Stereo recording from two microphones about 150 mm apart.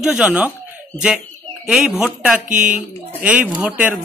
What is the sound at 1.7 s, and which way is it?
Speech, 5° right (ahead or behind).